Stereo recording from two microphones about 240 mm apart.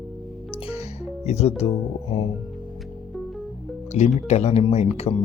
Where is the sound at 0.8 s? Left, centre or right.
Left.